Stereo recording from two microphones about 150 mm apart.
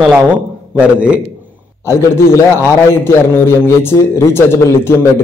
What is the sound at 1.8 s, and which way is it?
A man's voice, 20° left (ahead or behind).